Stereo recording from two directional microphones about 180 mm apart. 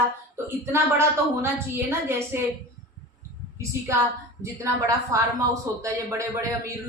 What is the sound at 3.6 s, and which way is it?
Speech, 15° right (ahead or behind).